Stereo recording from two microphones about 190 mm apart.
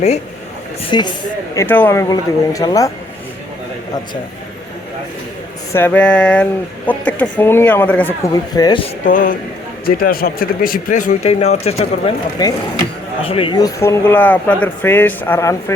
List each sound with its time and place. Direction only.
0.9 s speech: 25° left (ahead or behind)
1.5 s speech: 10° left (ahead or behind)
5.7 s speech: 10° left (ahead or behind)
8.3 s speech: 20° left (ahead or behind)
9.0 s speech: 45° left (ahead or behind)
12.4 s speech: 20° left (ahead or behind)